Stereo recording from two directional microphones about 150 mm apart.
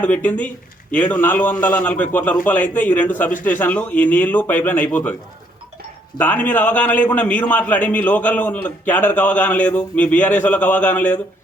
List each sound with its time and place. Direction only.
0.0 s a man's voice: 10° left (ahead or behind)
6.1 s a man's voice: 10° left (ahead or behind)